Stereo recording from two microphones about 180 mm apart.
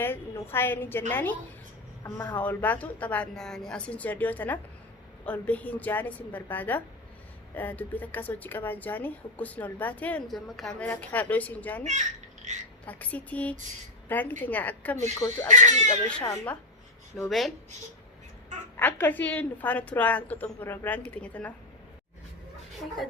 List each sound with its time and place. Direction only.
0.0 s speech: 10° left (ahead or behind)
11.9 s babbling: 40° right (ahead or behind)
12.8 s speech: 10° left (ahead or behind)
15.4 s speech: 40° right (ahead or behind)
16.2 s speech: 20° left (ahead or behind)
17.2 s speech: centre (ahead or behind)
18.8 s speech: 10° left (ahead or behind)